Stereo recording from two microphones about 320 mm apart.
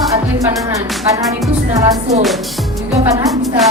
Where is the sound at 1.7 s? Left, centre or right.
Right.